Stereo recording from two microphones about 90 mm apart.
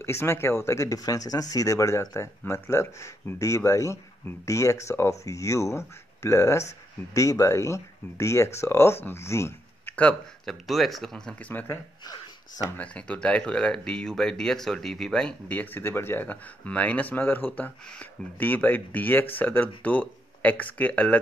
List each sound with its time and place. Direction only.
0.0 s speech: 30° left (ahead or behind)
9.8 s a sound: 15° left (ahead or behind)
10.4 s speech: centre (ahead or behind); by 21.2 s 15° left (ahead or behind)